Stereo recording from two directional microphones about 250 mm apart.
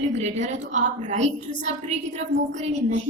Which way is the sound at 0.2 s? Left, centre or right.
Right.